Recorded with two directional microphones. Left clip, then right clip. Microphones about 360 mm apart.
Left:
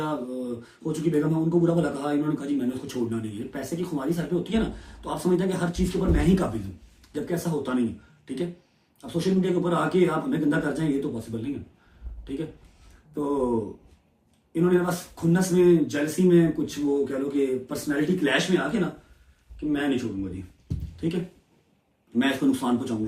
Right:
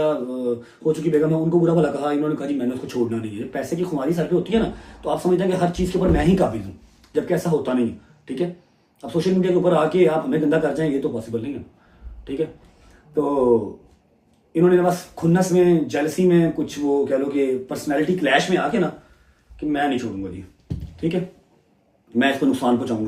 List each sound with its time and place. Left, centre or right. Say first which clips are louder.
0.0 s speech: right 9 dB; centre
14.5 s speech: right 7 dB; centre
22.2 s speech: right 5 dB; centre